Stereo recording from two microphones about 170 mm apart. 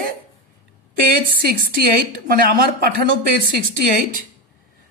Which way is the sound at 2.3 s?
60° right (ahead or behind).